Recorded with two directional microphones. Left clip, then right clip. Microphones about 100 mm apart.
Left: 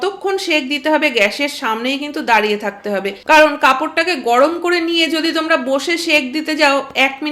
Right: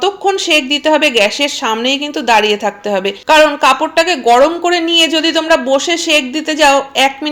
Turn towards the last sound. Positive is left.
turn(degrees=-20)  # may be behind; listen again after turning